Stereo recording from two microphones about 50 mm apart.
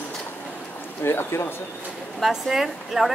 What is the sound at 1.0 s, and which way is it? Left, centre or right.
Speech, left.